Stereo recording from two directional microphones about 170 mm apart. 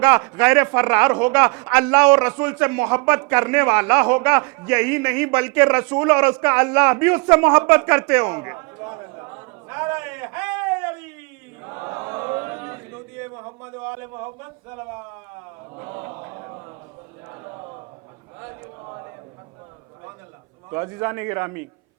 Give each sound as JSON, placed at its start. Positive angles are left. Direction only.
{"t": 0.0, "sound": "speech", "side_deg": -10}
{"t": 11.6, "sound": "chant", "side_deg": -20}
{"t": 13.8, "sound": "speech", "side_deg": -15}
{"t": 15.7, "sound": "chant", "side_deg": -20}
{"t": 16.2, "sound": "a sound", "side_deg": -20}
{"t": 20.7, "sound": "a man's voice", "side_deg": -15}